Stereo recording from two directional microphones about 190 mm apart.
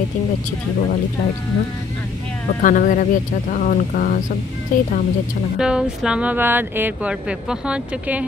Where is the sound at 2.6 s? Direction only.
45° left (ahead or behind).